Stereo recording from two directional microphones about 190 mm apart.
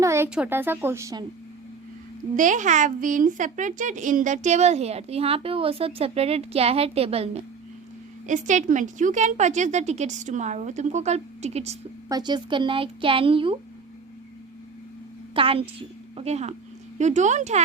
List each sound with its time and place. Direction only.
0.0 s speech: 15° right (ahead or behind)
2.3 s a woman's voice: 40° right (ahead or behind)
12.0 s speech: 20° right (ahead or behind)
15.4 s a woman's voice: 30° right (ahead or behind)